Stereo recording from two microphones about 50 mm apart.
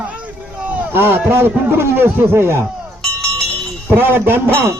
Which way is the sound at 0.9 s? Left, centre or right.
Right.